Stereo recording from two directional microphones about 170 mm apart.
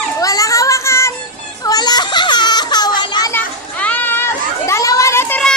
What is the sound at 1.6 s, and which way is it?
Baby cry, 25° left (ahead or behind).